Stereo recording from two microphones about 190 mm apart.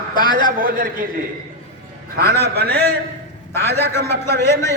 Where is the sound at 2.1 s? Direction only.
55° right (ahead or behind).